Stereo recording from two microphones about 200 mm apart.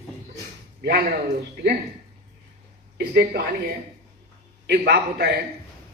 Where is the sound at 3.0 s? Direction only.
50° right (ahead or behind).